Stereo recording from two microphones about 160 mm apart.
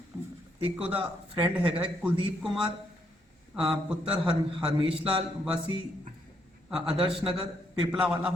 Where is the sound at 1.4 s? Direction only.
10° right (ahead or behind).